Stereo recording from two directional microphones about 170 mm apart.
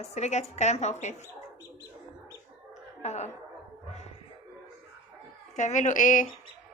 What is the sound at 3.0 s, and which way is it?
Speech, 40° left (ahead or behind).